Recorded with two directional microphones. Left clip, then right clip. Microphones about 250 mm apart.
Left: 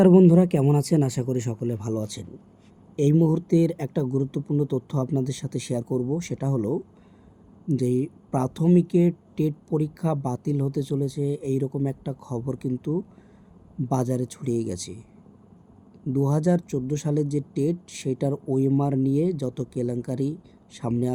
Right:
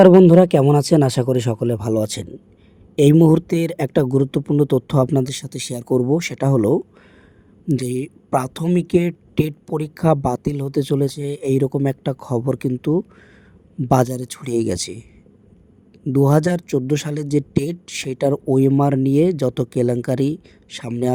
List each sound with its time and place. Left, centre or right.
0.0 s speech: centre; by 6.7 s right
7.7 s speech: right
16.0 s speech: right